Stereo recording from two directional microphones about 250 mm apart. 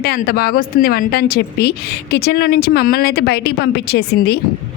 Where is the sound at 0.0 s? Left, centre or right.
Left.